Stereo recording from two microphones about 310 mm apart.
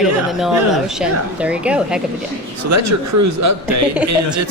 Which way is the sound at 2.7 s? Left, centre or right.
Right.